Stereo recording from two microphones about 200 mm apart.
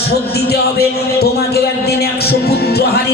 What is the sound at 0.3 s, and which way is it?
Speech, 50° left (ahead or behind).